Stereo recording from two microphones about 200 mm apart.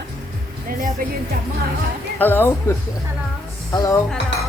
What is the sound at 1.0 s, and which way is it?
Speech, 45° right (ahead or behind).